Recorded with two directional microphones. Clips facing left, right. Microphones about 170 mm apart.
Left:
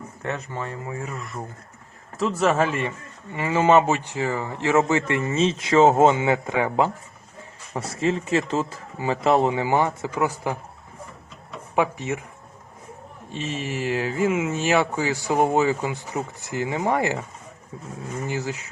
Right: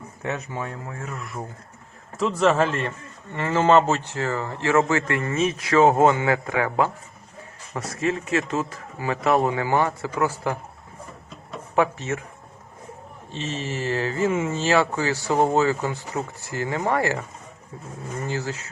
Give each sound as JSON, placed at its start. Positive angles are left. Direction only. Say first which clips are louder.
{"t": 0.2, "sound": "speech", "louder": "right 1 dB", "side_deg": -10}
{"t": 0.9, "sound": "a man's voice", "louder": "left 2 dB", "side_deg": 5}
{"t": 11.7, "sound": "a man's voice", "louder": "right 1 dB", "side_deg": 15}
{"t": 13.3, "sound": "a man's voice", "louder": "left 1 dB", "side_deg": 10}
{"t": 14.6, "sound": "a man's voice", "louder": "right 1 dB", "side_deg": 15}
{"t": 18.3, "sound": "a man's voice", "louder": "even", "side_deg": 15}